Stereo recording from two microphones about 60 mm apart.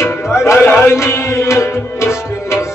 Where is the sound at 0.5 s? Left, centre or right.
Left.